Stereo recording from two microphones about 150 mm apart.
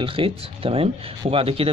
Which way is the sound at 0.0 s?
35° right (ahead or behind).